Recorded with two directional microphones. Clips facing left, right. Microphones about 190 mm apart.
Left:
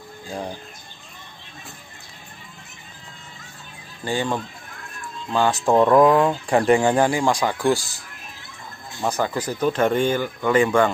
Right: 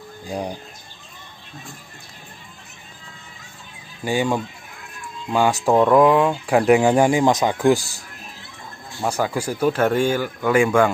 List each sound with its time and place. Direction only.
0.3 s speech: 15° right (ahead or behind)
4.0 s speech: 10° right (ahead or behind)
5.7 s speech: centre (ahead or behind)
7.1 s speech: 20° right (ahead or behind)
9.0 s speech: 10° right (ahead or behind)